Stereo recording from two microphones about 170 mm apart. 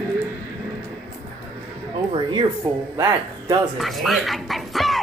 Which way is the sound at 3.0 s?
15° right (ahead or behind).